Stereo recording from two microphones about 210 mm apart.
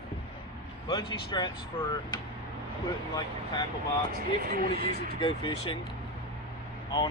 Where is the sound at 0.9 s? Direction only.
20° left (ahead or behind).